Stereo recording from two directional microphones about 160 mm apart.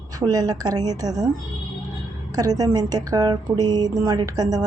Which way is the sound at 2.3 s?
25° right (ahead or behind).